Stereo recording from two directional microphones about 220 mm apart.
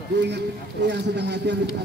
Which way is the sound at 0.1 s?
50° right (ahead or behind).